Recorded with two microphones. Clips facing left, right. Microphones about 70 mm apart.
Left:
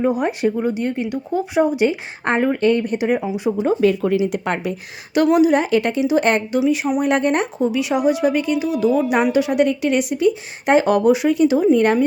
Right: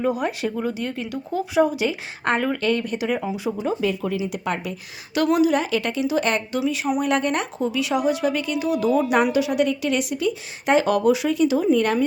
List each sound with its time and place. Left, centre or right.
0.0 s speech: left
3.6 s speech: left
5.1 s speech: left
6.7 s speech: centre
8.5 s speech: centre
9.3 s speech: left